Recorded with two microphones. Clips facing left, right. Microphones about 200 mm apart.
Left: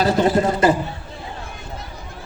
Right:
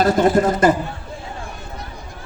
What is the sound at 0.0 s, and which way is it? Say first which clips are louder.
Speech: right 2 dB; 50° right (ahead or behind).